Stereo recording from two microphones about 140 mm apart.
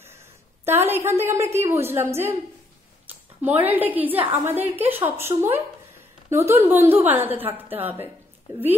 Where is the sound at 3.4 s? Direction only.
15° right (ahead or behind).